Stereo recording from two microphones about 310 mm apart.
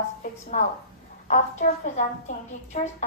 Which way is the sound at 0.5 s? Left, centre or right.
Left.